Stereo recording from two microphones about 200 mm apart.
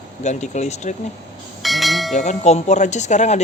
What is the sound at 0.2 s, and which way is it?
Speech, 35° left (ahead or behind).